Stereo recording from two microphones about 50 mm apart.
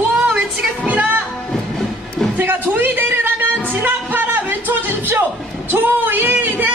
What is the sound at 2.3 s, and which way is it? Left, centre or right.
Music, right.